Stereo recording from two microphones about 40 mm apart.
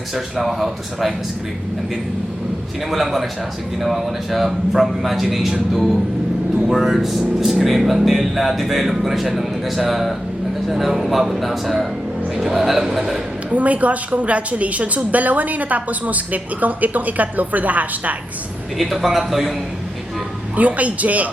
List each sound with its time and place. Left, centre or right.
0.1 s speech: centre
2.9 s a man's voice: centre
13.5 s a woman's voice: right
18.8 s speech: centre
20.6 s a woman's voice: right